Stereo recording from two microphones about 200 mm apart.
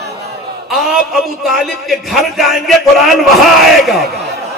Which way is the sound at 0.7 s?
Centre (ahead or behind).